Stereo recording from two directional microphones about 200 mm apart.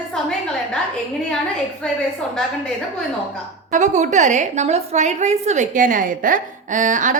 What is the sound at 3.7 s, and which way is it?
A woman's voice, 35° right (ahead or behind).